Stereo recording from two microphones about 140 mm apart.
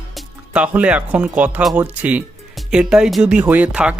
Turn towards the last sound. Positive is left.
turn(degrees=-10)  # may be behind; listen again after turning